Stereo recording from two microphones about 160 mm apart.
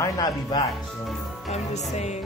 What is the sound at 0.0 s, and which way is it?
Speech, 25° left (ahead or behind).